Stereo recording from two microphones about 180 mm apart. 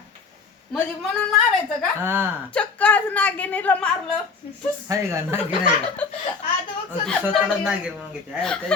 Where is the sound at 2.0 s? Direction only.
10° right (ahead or behind).